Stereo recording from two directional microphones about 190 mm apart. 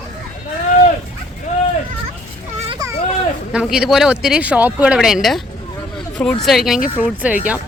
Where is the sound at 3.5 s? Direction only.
5° right (ahead or behind).